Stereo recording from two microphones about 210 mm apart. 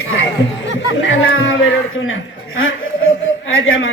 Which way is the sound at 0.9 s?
65° left (ahead or behind).